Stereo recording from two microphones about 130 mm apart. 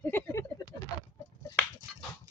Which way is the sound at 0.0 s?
15° left (ahead or behind).